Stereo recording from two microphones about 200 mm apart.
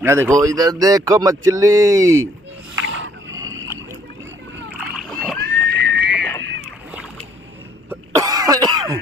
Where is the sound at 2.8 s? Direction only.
70° right (ahead or behind).